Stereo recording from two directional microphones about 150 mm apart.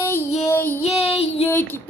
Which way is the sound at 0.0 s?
15° left (ahead or behind).